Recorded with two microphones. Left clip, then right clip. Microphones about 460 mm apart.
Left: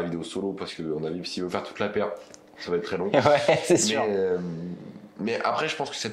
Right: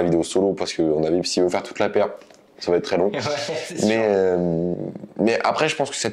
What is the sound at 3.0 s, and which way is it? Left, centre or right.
Speech, left.